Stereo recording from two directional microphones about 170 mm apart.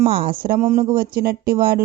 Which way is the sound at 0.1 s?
65° right (ahead or behind).